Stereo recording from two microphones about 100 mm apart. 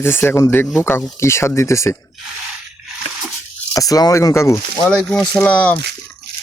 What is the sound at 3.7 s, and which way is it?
Speech, 35° left (ahead or behind).